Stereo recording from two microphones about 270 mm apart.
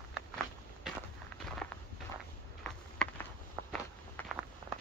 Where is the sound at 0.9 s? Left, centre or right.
Centre.